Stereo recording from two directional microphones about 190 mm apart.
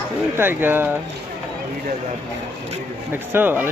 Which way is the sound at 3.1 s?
10° right (ahead or behind).